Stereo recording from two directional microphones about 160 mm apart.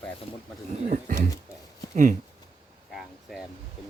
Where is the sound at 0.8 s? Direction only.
55° right (ahead or behind).